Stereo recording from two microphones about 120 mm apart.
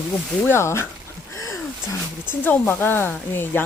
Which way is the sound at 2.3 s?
15° left (ahead or behind).